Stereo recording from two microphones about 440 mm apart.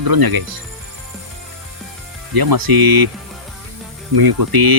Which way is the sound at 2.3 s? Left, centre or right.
Right.